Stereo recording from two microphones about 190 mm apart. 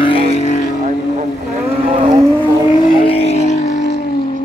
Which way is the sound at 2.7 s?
30° left (ahead or behind).